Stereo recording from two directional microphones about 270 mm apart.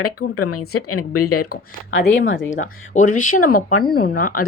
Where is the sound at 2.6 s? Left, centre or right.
Left.